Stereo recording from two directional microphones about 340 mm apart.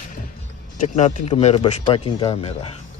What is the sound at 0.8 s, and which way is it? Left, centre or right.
Speech, left.